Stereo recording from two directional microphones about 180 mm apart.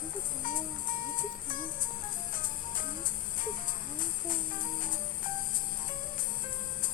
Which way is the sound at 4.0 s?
50° left (ahead or behind).